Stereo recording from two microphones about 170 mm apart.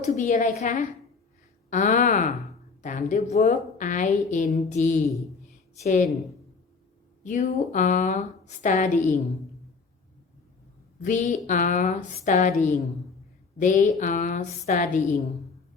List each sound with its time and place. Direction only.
0.0 s a woman's voice: 45° left (ahead or behind)
7.3 s a woman's voice: 45° left (ahead or behind)
11.0 s a woman's voice: 50° left (ahead or behind)